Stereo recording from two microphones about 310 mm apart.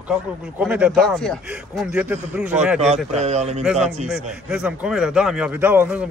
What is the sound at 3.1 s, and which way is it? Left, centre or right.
Speech, right.